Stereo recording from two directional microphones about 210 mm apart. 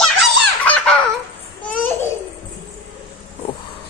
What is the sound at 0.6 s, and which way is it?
Baby laughter, 5° left (ahead or behind).